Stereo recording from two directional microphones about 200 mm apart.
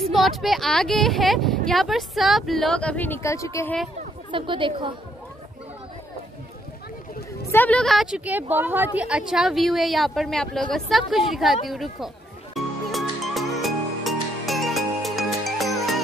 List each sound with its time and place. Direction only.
0.0 s a woman's voice: centre (ahead or behind)
4.3 s speech: 25° right (ahead or behind)
7.5 s a woman's voice: 5° left (ahead or behind)
12.9 s music: centre (ahead or behind)